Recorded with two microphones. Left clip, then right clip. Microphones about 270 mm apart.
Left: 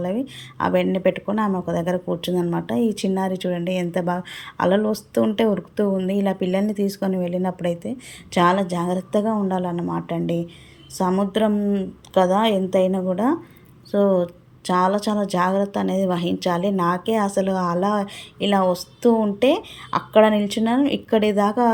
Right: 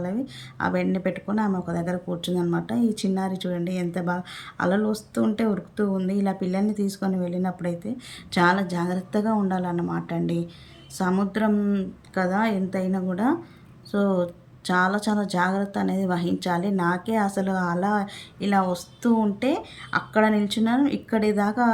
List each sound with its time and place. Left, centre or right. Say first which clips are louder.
0.6 s speech: left 6 dB; centre
12.5 s a woman's voice: left 9 dB; centre
12.9 s speech: left 4 dB; centre